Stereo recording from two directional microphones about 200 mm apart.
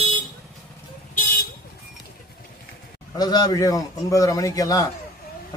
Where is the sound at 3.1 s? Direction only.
20° left (ahead or behind).